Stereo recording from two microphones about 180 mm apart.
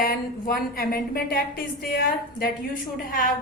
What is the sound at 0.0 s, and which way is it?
A woman's voice, 55° left (ahead or behind).